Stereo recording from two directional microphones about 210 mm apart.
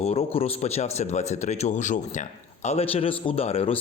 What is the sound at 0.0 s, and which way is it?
Speech, 30° left (ahead or behind).